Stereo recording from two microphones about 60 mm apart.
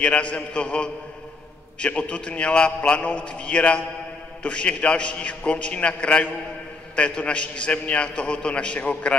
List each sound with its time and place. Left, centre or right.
0.0 s a man's voice: left